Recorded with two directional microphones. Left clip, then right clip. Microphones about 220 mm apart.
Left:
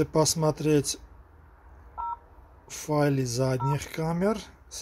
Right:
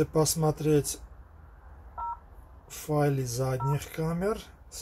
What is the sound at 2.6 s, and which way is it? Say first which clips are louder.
Speech: left 2 dB; 35° left (ahead or behind).